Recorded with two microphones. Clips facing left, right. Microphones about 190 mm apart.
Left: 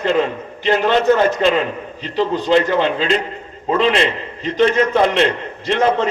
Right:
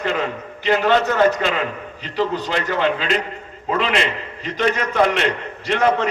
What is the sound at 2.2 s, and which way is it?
A man's voice, 25° left (ahead or behind).